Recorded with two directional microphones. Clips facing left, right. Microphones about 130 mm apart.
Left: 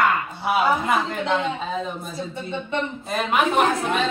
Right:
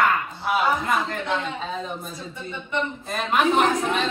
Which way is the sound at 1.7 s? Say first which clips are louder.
Left 3 dB; centre (ahead or behind).